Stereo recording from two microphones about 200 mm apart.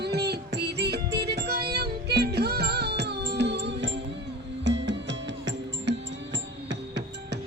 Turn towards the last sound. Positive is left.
turn(degrees=-60)  # may be behind; listen again after turning